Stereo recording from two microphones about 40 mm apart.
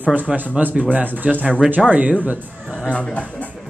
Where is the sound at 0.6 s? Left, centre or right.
Right.